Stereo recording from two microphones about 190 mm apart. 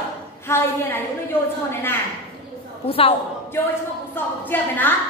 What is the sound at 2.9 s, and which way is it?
Speech, 30° left (ahead or behind).